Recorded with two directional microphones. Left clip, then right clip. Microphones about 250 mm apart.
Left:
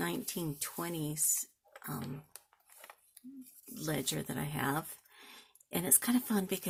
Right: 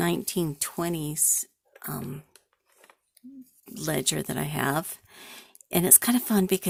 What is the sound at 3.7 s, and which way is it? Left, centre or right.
Speech, right.